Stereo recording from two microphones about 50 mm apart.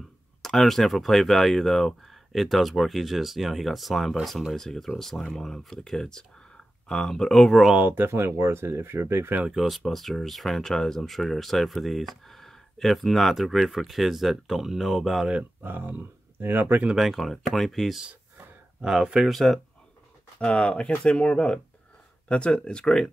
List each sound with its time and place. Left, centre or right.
0.4 s speech: centre
7.8 s speech: right
8.1 s speech: right
9.5 s speech: centre
15.6 s speech: right
17.1 s speech: centre
19.3 s speech: centre
20.3 s speech: left